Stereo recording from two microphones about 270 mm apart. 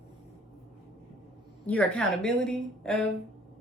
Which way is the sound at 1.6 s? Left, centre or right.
Centre.